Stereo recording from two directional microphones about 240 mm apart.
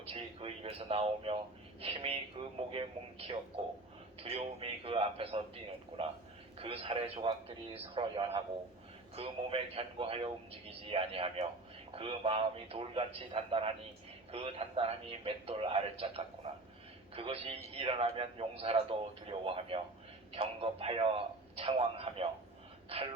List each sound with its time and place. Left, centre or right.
0.0 s speech: right